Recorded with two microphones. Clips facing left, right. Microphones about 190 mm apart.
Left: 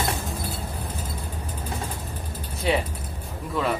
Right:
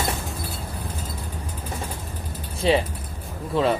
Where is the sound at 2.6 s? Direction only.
30° right (ahead or behind).